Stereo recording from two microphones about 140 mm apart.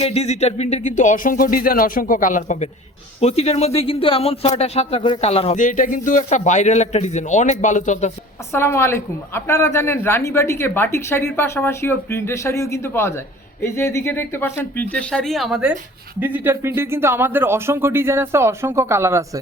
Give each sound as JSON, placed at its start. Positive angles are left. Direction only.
{"t": 0.0, "sound": "speech", "side_deg": 50}
{"t": 3.2, "sound": "speech", "side_deg": 45}
{"t": 5.5, "sound": "speech", "side_deg": 65}
{"t": 8.5, "sound": "speech", "side_deg": 20}
{"t": 16.2, "sound": "speech", "side_deg": -15}